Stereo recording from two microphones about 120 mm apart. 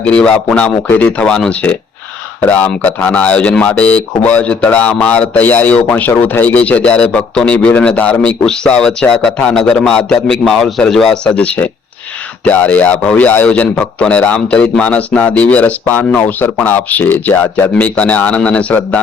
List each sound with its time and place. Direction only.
0.0 s speech: 10° left (ahead or behind)